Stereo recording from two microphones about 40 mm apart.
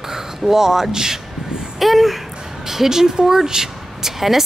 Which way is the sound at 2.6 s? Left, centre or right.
Centre.